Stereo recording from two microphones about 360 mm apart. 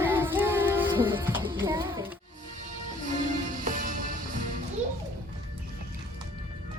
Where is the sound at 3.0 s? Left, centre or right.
Right.